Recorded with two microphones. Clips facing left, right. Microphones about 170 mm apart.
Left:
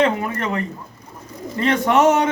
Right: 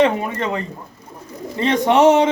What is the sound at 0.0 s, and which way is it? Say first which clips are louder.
A man's voice: right 2 dB; 20° right (ahead or behind).